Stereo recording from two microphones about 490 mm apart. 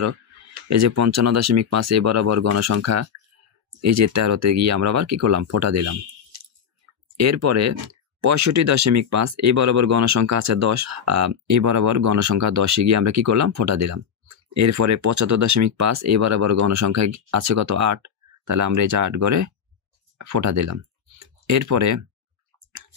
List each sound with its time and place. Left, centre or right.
0.7 s speech: right
7.2 s speech: right